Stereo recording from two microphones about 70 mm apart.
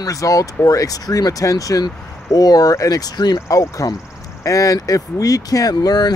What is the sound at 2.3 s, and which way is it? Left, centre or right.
Speech, left.